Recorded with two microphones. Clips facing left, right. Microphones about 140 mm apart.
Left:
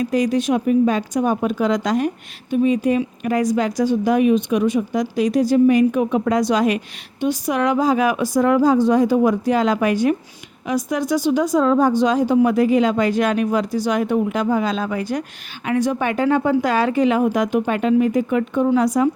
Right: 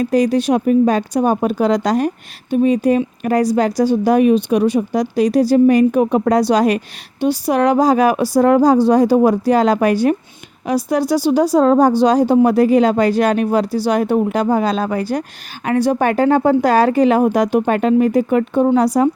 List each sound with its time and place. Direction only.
0.0 s speech: 35° right (ahead or behind)